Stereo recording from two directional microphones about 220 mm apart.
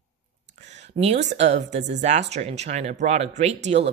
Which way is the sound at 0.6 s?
30° right (ahead or behind).